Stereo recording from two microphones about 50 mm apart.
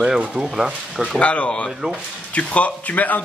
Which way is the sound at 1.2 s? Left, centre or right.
Left.